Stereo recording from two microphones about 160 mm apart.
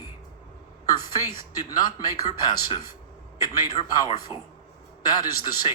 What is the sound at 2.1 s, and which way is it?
Speech, 25° left (ahead or behind).